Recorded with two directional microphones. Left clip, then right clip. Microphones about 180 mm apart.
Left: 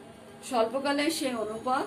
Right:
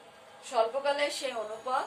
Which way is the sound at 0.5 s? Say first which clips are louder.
Left 1 dB; 60° left (ahead or behind).